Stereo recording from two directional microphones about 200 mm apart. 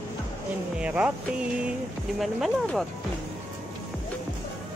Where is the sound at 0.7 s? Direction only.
5° right (ahead or behind).